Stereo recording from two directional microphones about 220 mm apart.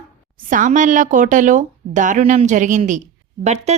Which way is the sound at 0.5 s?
35° right (ahead or behind).